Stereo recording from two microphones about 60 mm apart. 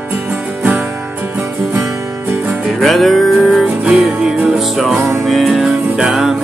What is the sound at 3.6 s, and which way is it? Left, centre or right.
Music, centre.